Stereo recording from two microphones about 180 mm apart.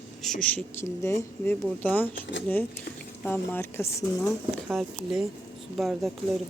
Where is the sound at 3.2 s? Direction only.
10° left (ahead or behind).